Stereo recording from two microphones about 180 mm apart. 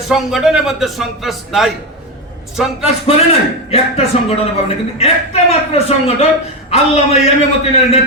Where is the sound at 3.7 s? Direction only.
35° left (ahead or behind).